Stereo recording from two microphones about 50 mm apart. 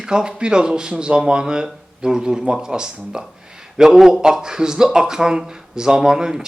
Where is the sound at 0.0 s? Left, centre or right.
Centre.